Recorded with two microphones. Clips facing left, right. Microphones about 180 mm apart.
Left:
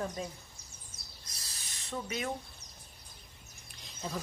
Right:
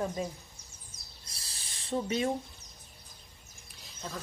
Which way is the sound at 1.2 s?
30° right (ahead or behind).